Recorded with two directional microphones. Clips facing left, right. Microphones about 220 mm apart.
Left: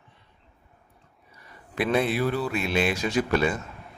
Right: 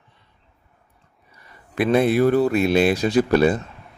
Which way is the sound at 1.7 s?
45° right (ahead or behind).